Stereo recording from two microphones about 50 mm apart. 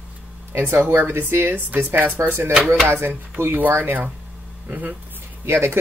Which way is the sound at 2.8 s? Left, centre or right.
Right.